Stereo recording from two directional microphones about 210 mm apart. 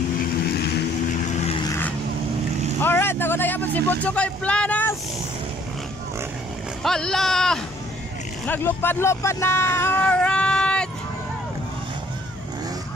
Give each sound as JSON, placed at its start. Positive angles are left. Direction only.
{"t": 0.2, "sound": "vehicle", "side_deg": 50}
{"t": 1.2, "sound": "vehicle", "side_deg": 30}
{"t": 1.7, "sound": "vehicle", "side_deg": 10}
{"t": 2.8, "sound": "speech", "side_deg": 10}
{"t": 6.8, "sound": "speech", "side_deg": 0}